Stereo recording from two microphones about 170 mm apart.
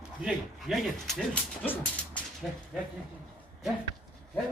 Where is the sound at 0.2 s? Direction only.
5° right (ahead or behind).